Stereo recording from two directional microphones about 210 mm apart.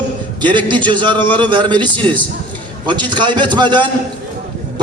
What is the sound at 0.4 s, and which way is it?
A man's voice, 20° right (ahead or behind).